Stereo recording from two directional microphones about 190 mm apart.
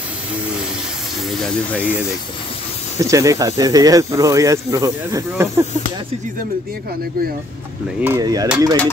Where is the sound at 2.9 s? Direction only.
15° right (ahead or behind).